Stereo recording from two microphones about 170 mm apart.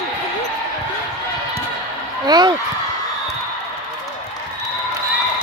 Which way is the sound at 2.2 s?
25° right (ahead or behind).